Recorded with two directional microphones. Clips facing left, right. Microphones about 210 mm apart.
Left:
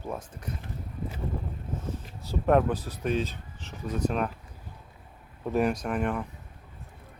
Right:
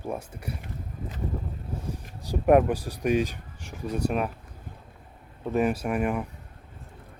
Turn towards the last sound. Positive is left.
turn(degrees=-10)  # may be behind; listen again after turning